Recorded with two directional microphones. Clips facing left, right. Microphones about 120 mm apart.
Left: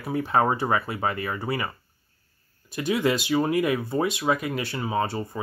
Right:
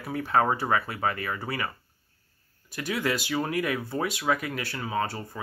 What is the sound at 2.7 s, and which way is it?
Speech, 20° left (ahead or behind).